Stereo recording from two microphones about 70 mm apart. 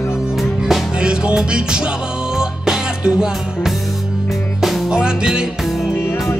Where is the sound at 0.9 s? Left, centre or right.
Centre.